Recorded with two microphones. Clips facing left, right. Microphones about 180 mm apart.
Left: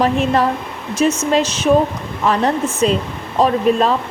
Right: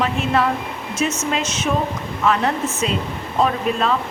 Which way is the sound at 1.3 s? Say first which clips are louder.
Left 8 dB; 35° left (ahead or behind).